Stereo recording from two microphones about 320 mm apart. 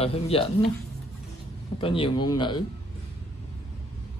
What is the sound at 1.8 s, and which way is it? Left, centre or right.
Speech, centre.